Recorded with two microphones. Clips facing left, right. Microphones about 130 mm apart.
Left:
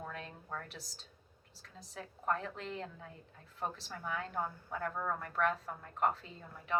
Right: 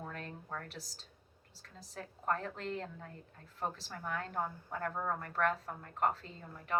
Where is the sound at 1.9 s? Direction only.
45° right (ahead or behind).